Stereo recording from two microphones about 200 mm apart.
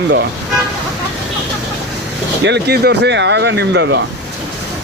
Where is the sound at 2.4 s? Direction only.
55° right (ahead or behind).